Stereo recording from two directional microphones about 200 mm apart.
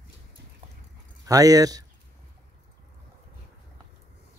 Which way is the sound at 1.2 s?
15° right (ahead or behind).